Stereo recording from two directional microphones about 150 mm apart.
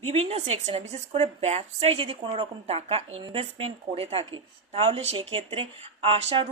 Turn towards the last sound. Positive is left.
turn(degrees=-40)  # may be behind; listen again after turning